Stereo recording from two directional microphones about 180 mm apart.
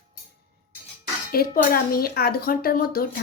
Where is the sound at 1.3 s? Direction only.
55° left (ahead or behind).